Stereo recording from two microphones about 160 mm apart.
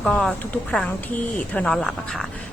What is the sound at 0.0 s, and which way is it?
A woman's voice, 5° left (ahead or behind).